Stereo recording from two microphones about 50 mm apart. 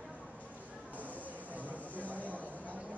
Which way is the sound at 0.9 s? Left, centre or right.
Left.